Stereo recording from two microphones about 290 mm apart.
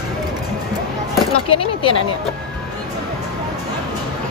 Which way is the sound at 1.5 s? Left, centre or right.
Centre.